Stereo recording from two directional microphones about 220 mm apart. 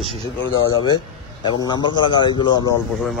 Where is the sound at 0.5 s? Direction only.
20° left (ahead or behind).